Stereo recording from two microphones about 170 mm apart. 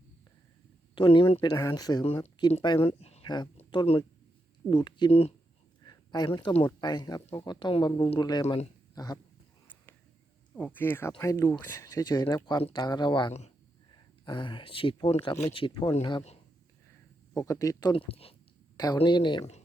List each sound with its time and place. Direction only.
0.9 s speech: 30° left (ahead or behind)
2.8 s speech: 35° left (ahead or behind)
3.2 s speech: 25° left (ahead or behind)
5.8 s a sound: 25° left (ahead or behind)
6.6 s speech: 25° left (ahead or behind)
10.5 s speech: 10° left (ahead or behind); by 16.4 s 30° left (ahead or behind)
17.3 s speech: 20° left (ahead or behind)